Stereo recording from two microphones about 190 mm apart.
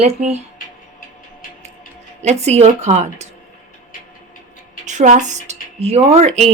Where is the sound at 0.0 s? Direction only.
35° right (ahead or behind).